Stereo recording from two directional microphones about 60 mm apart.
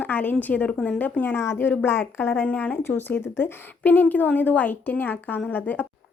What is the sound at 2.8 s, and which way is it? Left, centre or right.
A woman's voice, left.